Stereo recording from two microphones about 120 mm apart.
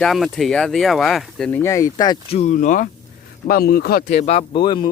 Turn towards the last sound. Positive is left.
turn(degrees=45)  # may be behind; listen again after turning